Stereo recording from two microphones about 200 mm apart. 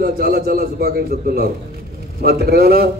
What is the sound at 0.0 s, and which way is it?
A man's voice, 50° right (ahead or behind).